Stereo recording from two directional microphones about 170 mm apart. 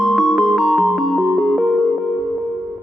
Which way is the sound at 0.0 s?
Centre (ahead or behind).